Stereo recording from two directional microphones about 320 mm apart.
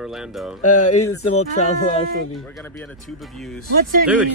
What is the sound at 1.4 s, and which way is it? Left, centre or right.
Speech, centre.